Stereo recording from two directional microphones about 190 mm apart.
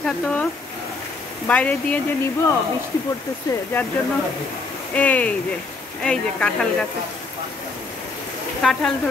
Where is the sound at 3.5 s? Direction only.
20° left (ahead or behind).